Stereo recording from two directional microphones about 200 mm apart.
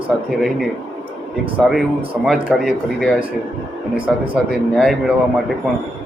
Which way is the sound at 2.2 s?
Centre (ahead or behind).